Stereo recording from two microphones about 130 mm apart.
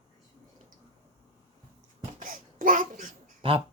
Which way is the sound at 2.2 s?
90° right.